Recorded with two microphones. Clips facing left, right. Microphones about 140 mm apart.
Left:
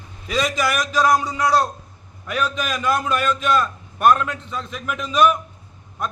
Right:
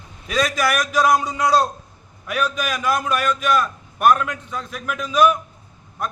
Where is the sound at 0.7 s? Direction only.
10° right (ahead or behind).